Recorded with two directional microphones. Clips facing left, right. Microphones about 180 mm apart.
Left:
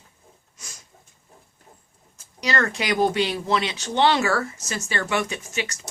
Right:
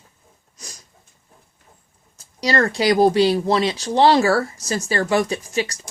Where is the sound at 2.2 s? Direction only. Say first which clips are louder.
Right 5 dB; 35° right (ahead or behind).